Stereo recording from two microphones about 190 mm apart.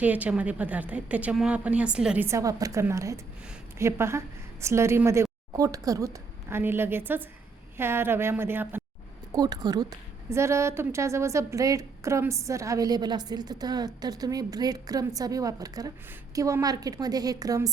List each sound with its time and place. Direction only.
0.0 s a woman's voice: 10° right (ahead or behind)